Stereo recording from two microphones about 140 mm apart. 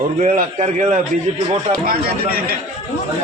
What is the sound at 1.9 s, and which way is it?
Speech, 90° right.